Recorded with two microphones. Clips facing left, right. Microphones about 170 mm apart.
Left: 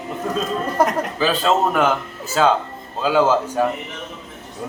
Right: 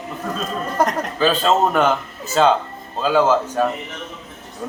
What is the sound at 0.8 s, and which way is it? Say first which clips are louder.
A man's voice: right 1 dB; 10° left (ahead or behind).